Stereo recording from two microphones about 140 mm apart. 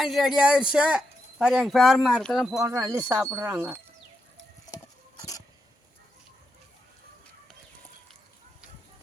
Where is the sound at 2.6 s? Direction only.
20° right (ahead or behind).